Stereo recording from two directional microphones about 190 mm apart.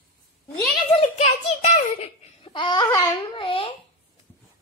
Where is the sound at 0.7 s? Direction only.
30° left (ahead or behind).